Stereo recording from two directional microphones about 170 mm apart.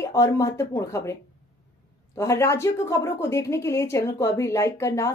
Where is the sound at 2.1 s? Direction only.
15° left (ahead or behind).